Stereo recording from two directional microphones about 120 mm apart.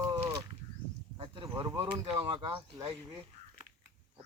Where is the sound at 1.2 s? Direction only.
40° right (ahead or behind).